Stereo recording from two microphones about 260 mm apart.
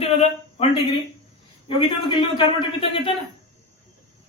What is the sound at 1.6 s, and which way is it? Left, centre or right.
A man's voice, centre.